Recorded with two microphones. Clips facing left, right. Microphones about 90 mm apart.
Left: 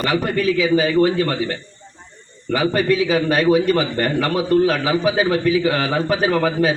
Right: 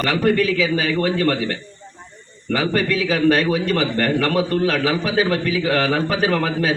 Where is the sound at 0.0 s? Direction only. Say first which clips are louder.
Right 1 dB; 10° left (ahead or behind).